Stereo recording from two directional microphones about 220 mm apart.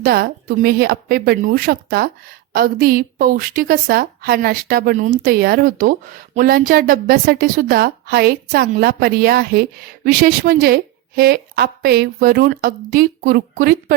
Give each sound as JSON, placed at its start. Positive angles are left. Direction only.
{"t": 0.0, "sound": "a woman's voice", "side_deg": -40}